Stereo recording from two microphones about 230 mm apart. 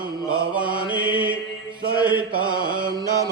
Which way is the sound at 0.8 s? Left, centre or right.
Centre.